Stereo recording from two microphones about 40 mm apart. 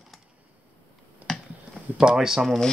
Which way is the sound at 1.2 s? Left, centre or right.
Right.